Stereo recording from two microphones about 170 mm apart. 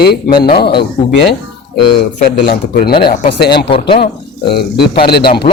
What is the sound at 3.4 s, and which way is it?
Speech, 75° left (ahead or behind).